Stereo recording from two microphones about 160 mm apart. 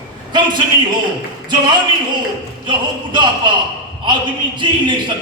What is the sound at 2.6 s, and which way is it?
A man's voice, 30° right (ahead or behind).